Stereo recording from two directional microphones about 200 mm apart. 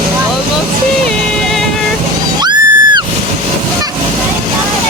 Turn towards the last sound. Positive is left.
turn(degrees=-20)  # may be behind; listen again after turning